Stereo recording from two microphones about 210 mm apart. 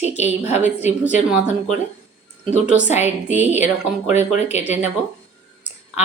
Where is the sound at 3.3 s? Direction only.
10° right (ahead or behind).